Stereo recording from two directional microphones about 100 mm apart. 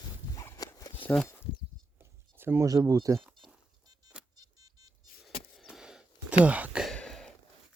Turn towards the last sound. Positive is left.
turn(degrees=5)  # may be behind; listen again after turning